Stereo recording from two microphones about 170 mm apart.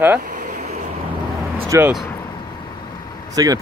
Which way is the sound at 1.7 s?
15° right (ahead or behind).